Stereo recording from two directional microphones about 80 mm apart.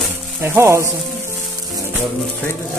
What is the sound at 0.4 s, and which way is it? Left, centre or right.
Speech, right.